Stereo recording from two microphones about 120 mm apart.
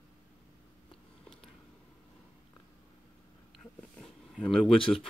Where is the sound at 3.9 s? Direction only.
5° left (ahead or behind).